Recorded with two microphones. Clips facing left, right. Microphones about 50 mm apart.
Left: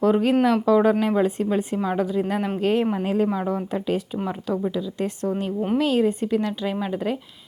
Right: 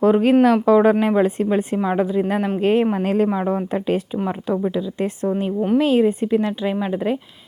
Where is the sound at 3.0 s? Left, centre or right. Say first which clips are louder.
Right 4 dB; right.